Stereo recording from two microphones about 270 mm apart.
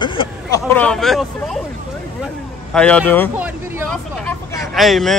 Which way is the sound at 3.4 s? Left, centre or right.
Centre.